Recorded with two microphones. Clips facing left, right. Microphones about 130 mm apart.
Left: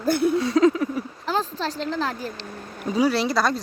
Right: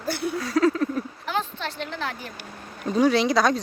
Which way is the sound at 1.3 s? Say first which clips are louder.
Left 6 dB; 35° left (ahead or behind).